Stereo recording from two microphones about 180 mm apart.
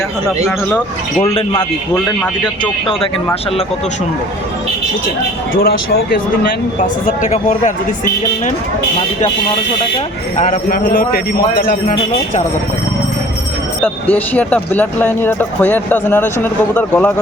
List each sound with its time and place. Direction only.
5.5 s speech: 55° left (ahead or behind)
7.2 s a man's voice: 45° left (ahead or behind)
10.3 s a man's voice: 45° left (ahead or behind)
13.8 s speech: 10° left (ahead or behind)